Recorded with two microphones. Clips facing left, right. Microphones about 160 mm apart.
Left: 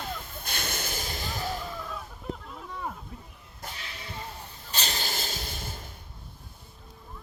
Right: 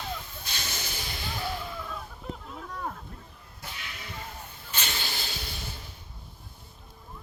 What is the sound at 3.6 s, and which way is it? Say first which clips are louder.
Snake: left 1 dB; 35° left (ahead or behind).